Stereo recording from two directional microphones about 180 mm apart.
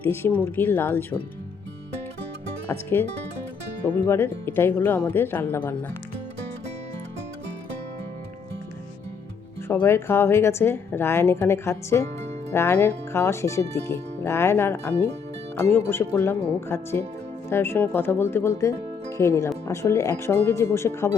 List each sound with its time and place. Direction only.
0.0 s speech: 10° left (ahead or behind)
2.6 s speech: 10° left (ahead or behind)
9.6 s speech: 15° left (ahead or behind)